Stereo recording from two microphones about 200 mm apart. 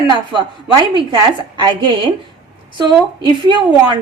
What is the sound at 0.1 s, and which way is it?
Speech, 25° right (ahead or behind).